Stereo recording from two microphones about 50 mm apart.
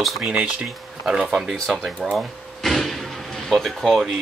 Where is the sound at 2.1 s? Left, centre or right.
Centre.